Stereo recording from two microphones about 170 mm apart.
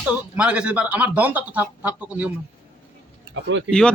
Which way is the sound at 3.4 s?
90° right.